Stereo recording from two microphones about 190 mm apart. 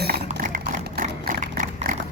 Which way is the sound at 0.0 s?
50° right (ahead or behind).